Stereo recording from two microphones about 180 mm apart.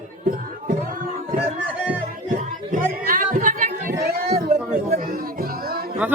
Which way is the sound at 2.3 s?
50° right (ahead or behind).